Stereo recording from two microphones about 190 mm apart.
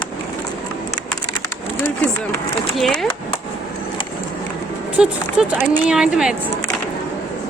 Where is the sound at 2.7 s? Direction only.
Centre (ahead or behind).